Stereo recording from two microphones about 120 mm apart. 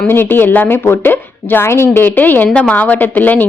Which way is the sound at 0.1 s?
20° left (ahead or behind).